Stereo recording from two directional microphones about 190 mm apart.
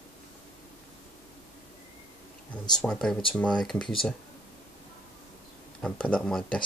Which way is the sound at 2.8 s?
5° left (ahead or behind).